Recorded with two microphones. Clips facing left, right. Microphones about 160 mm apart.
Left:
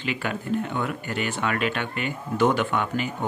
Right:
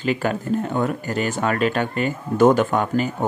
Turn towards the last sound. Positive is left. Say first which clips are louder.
# right 6 dB
turn(degrees=-40)  # may be behind; listen again after turning